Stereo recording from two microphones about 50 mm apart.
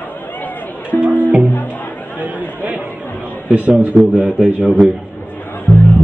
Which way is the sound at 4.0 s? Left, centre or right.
Right.